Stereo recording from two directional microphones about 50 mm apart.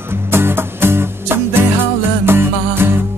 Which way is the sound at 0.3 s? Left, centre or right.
Right.